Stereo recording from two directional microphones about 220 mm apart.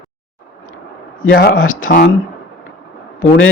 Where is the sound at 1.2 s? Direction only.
45° left (ahead or behind).